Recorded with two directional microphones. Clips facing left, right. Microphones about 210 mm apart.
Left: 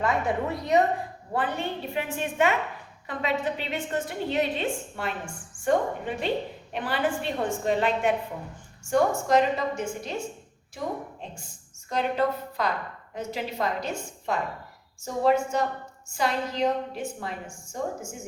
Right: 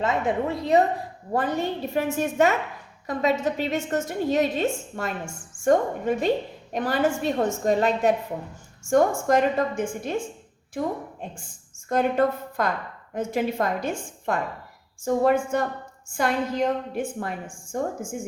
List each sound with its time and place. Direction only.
0.0 s a woman's voice: 20° right (ahead or behind)
1.3 s a woman's voice: 40° right (ahead or behind)
11.9 s a woman's voice: 50° right (ahead or behind)